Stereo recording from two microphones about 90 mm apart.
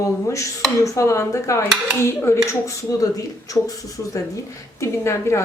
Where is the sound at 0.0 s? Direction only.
35° left (ahead or behind).